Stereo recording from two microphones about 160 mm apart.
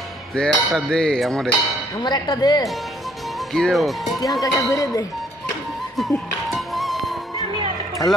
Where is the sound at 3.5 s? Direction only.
Centre (ahead or behind).